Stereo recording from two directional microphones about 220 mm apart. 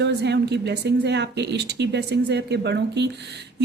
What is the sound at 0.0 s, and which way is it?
A woman's voice, 50° right (ahead or behind).